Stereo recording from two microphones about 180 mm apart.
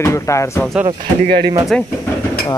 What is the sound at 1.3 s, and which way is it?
Speech, 60° right (ahead or behind).